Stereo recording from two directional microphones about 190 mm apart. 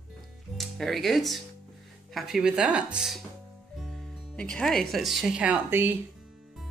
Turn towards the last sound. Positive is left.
turn(degrees=-10)  # may be behind; listen again after turning